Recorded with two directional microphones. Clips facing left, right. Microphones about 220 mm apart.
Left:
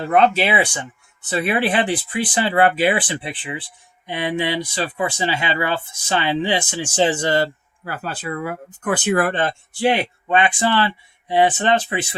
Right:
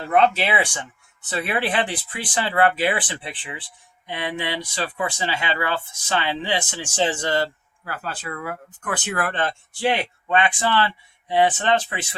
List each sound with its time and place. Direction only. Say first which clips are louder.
0.3 s speech: left 4 dB; 10° left (ahead or behind)